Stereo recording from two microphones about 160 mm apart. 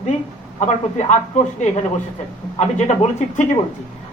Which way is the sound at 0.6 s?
45° left (ahead or behind).